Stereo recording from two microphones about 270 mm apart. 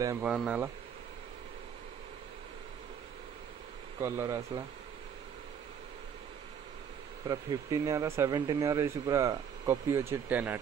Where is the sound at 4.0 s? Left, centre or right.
Centre.